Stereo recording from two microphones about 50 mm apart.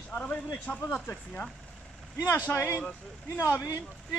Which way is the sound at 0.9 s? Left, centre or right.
Left.